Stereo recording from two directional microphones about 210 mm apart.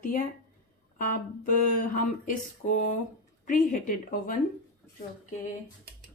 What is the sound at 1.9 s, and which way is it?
Speech, 40° left (ahead or behind).